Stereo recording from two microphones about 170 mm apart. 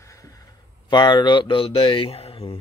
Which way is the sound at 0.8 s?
25° left (ahead or behind).